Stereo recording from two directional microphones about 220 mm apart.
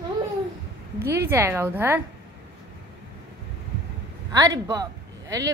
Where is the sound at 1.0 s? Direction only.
10° right (ahead or behind).